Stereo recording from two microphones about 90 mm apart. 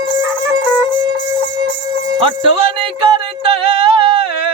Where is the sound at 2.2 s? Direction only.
85° right.